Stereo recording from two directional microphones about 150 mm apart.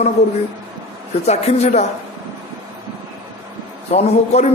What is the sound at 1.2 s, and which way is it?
Speech, 45° left (ahead or behind).